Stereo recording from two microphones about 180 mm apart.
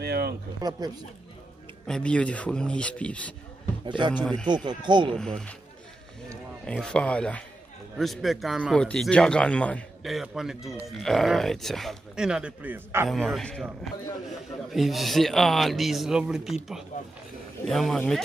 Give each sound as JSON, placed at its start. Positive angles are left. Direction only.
{"t": 0.0, "sound": "a sound", "side_deg": -60}
{"t": 0.6, "sound": "speech", "side_deg": -20}
{"t": 1.9, "sound": "speech", "side_deg": 5}
{"t": 3.8, "sound": "speech", "side_deg": -25}
{"t": 4.1, "sound": "speech", "side_deg": 10}
{"t": 4.6, "sound": "speech", "side_deg": -25}
{"t": 5.1, "sound": "speech", "side_deg": 5}
{"t": 6.6, "sound": "speech", "side_deg": 5}
{"t": 13.1, "sound": "a man's voice", "side_deg": 0}
{"t": 17.6, "sound": "speech", "side_deg": 0}